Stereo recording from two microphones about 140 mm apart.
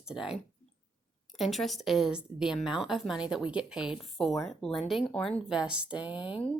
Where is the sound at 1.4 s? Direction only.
Centre (ahead or behind).